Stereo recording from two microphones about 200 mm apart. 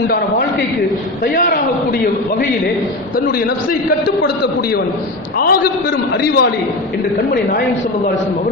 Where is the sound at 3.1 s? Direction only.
50° left (ahead or behind).